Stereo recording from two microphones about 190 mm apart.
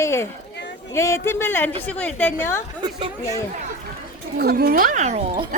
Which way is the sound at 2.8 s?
25° right (ahead or behind).